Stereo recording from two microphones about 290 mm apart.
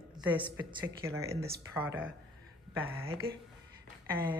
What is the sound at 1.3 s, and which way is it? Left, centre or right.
Speech, right.